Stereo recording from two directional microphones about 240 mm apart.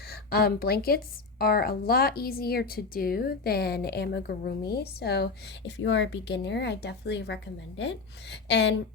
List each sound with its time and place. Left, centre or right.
0.1 s speech: left